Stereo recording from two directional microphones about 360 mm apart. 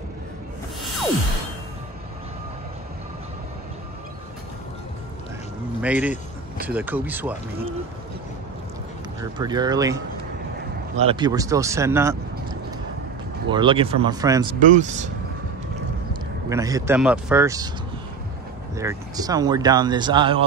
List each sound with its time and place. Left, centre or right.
5.8 s speech: centre
9.2 s speech: centre
14.6 s speech: centre
16.4 s speech: centre
18.8 s speech: centre